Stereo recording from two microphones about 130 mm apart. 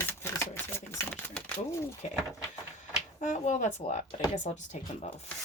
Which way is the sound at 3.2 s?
70° left (ahead or behind).